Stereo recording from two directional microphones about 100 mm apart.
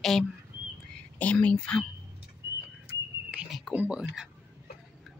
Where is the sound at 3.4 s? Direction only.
Centre (ahead or behind).